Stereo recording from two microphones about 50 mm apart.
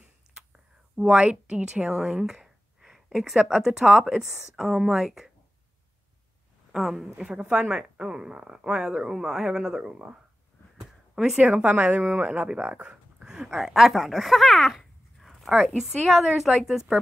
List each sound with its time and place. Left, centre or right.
0.9 s a woman's voice: right; by 5.3 s centre
6.7 s speech: centre
7.2 s speech: centre
11.4 s speech: right; by 14.8 s centre
14.8 s a sound: centre
15.5 s speech: centre